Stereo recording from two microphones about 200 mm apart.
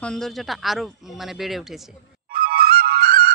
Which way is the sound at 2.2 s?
50° right (ahead or behind).